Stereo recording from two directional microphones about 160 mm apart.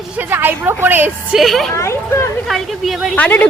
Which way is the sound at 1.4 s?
Centre (ahead or behind).